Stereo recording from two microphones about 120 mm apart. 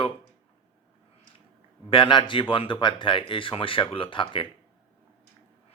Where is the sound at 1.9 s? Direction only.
45° left (ahead or behind).